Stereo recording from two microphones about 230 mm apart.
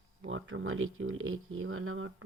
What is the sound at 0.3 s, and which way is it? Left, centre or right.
Speech, right.